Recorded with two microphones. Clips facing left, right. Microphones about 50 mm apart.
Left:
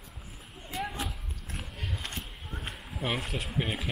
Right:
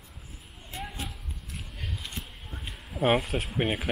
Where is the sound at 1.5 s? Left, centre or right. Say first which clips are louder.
Left 1 dB; left.